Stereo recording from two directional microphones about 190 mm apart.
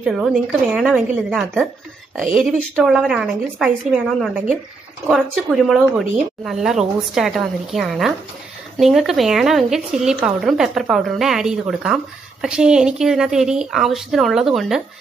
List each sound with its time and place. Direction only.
0.0 s a woman's voice: centre (ahead or behind)